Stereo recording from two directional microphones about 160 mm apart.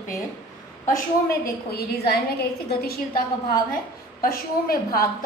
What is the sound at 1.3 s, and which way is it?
A woman's voice, 75° left (ahead or behind).